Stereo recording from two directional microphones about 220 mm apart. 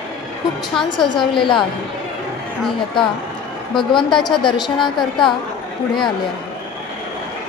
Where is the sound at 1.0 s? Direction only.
20° left (ahead or behind).